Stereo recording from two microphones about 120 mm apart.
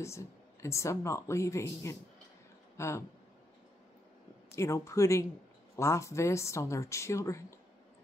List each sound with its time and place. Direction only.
0.0 s speech: 25° left (ahead or behind)
4.6 s speech: 25° left (ahead or behind)